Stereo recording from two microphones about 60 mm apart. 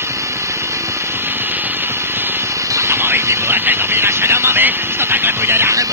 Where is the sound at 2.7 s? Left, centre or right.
Right.